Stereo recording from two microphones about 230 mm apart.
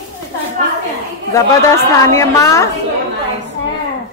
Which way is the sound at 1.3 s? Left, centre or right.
Centre.